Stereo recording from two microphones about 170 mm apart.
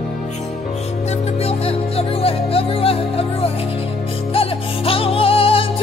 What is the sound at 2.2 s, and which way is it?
Music, 35° left (ahead or behind).